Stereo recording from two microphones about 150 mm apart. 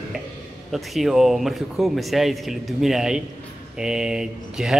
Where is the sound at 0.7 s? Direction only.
Centre (ahead or behind).